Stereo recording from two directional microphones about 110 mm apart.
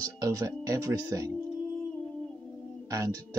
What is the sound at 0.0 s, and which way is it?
Speech, 30° right (ahead or behind).